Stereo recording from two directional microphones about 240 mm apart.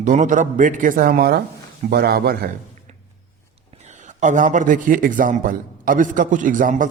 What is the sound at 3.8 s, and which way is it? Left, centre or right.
A man's voice, right.